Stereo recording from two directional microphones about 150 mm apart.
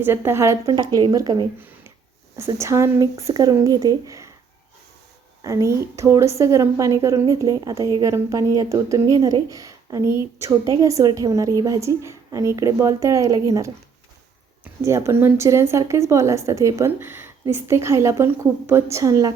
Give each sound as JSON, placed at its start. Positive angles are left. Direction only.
{"t": 0.0, "sound": "a woman's voice", "side_deg": -15}
{"t": 5.4, "sound": "a woman's voice", "side_deg": -20}